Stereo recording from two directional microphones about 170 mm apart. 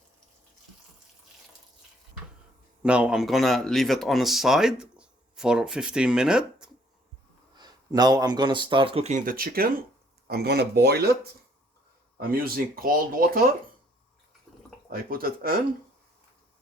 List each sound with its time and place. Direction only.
2.8 s speech: 5° right (ahead or behind)
7.5 s speech: 25° right (ahead or behind); by 9.7 s 60° right (ahead or behind)
10.2 s speech: 70° right (ahead or behind)
14.9 s speech: 60° right (ahead or behind)